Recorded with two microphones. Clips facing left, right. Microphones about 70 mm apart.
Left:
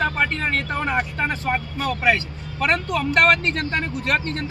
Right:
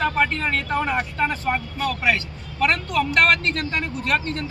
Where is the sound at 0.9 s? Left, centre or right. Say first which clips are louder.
Even; left.